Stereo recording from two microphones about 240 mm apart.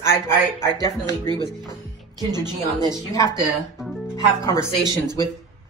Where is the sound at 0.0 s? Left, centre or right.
Centre.